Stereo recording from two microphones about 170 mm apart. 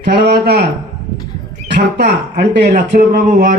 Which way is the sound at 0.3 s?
70° right (ahead or behind).